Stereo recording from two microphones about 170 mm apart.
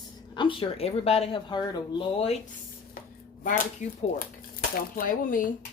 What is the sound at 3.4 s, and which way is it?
Speech, 50° left (ahead or behind).